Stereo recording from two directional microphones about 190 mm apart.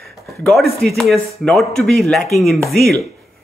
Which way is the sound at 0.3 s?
Centre (ahead or behind).